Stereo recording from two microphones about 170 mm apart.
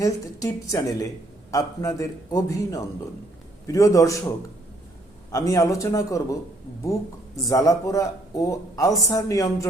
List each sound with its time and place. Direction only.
0.0 s a man's voice: 20° left (ahead or behind)
5.3 s a man's voice: 20° left (ahead or behind)
7.4 s a man's voice: 20° left (ahead or behind)